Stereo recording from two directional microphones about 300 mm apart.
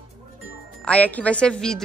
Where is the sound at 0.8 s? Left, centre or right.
Centre.